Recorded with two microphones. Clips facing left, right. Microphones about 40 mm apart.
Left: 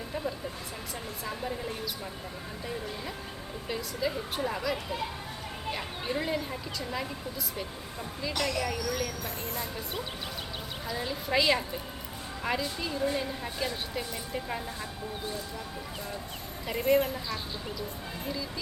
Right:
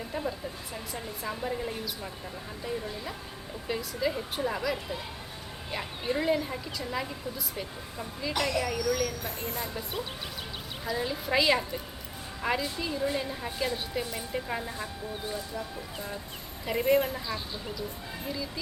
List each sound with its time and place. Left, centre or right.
0.1 s a sound: centre
1.2 s a woman's voice: centre
3.7 s a woman's voice: centre
9.2 s speech: right
9.6 s a woman's voice: centre
16.6 s a woman's voice: centre